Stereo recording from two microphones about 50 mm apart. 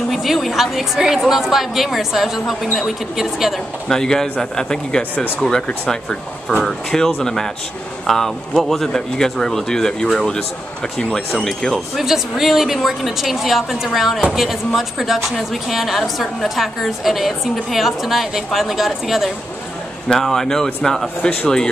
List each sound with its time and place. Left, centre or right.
0.1 s a woman's voice: centre
3.9 s speech: centre
11.4 s a woman's voice: centre
12.0 s a woman's voice: centre
20.1 s speech: centre